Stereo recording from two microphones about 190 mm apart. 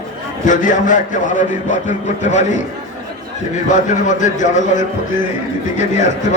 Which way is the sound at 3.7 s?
40° left (ahead or behind).